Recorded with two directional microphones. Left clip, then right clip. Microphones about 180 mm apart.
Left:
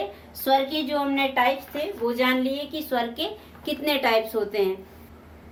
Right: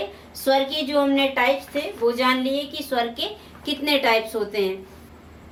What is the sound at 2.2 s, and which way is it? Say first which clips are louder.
A woman's voice: right 2 dB; 35° left (ahead or behind).